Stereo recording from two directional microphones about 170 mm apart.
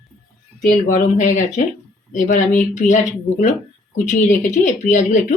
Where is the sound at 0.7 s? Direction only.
50° left (ahead or behind).